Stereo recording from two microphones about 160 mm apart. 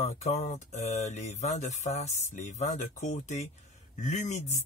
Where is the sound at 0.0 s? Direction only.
45° left (ahead or behind).